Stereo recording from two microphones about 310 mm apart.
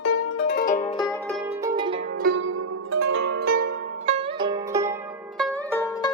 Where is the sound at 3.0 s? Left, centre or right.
Right.